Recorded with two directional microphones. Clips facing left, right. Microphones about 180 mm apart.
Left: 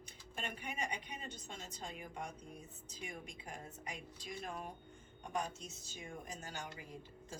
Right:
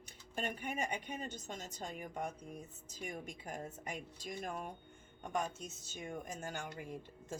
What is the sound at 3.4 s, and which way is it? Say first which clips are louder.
Speech: right 5 dB; 45° right (ahead or behind).